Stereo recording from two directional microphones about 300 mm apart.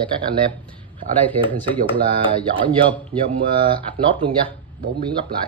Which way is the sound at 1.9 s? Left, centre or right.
Centre.